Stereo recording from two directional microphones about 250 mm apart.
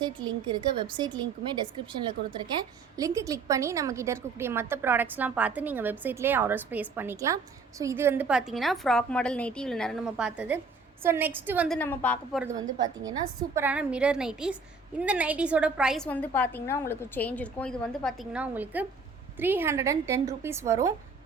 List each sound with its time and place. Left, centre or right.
0.0 s a woman's voice: centre
11.8 s a woman's voice: centre
12.8 s a woman's voice: centre